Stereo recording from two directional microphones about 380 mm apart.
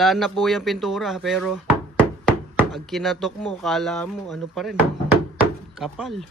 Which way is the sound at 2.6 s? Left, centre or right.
Centre.